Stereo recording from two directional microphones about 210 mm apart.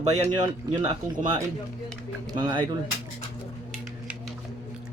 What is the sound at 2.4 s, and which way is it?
Speech, 20° right (ahead or behind).